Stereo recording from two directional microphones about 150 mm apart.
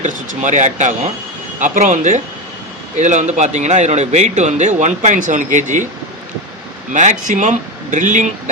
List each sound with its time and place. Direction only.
0.0 s a man's voice: 55° right (ahead or behind)
6.9 s speech: 55° right (ahead or behind)